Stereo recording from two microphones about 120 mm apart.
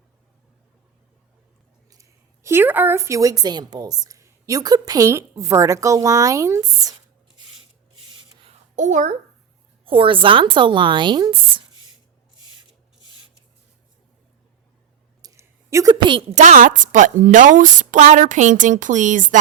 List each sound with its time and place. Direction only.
1.9 s a woman's voice: 25° right (ahead or behind)
8.7 s a child's voice: 90° right
9.8 s speech: 45° right (ahead or behind)
15.2 s a sound: 25° right (ahead or behind)
16.3 s a woman's voice: 90° right